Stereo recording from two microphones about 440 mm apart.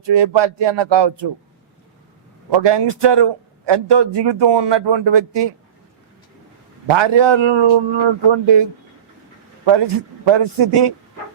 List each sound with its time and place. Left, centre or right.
0.0 s a man's voice: right
2.5 s a man's voice: right
6.8 s a man's voice: right
9.6 s a man's voice: right